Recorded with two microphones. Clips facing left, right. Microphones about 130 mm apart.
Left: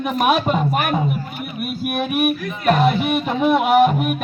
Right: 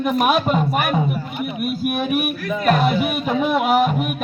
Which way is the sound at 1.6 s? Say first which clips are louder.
Even; centre (ahead or behind).